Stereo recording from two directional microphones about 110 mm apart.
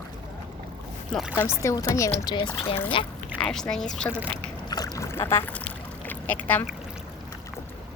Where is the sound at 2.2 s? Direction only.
40° left (ahead or behind).